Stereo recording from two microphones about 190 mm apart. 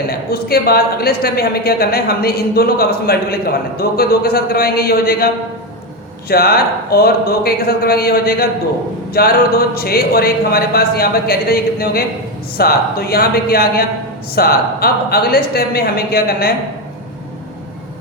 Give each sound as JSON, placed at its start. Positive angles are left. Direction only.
{"t": 0.1, "sound": "speech", "side_deg": 55}